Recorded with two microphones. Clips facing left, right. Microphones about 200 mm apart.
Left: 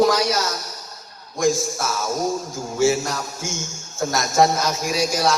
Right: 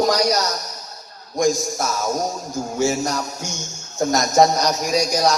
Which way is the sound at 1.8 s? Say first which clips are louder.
Left 1 dB; 40° right (ahead or behind).